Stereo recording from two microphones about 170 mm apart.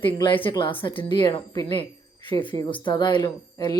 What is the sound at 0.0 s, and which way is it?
Speech, 30° left (ahead or behind).